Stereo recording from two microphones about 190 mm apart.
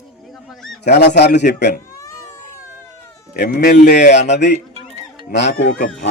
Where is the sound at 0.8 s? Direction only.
65° left (ahead or behind).